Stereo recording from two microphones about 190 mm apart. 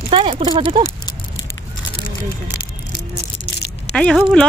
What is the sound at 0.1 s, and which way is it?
Speech, 30° right (ahead or behind).